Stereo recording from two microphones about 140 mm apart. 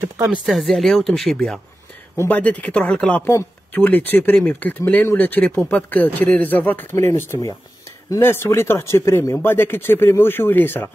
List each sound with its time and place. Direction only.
0.0 s speech: 15° right (ahead or behind)
0.5 s speech: centre (ahead or behind)